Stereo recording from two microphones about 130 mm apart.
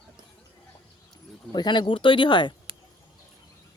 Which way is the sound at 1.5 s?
35° left (ahead or behind).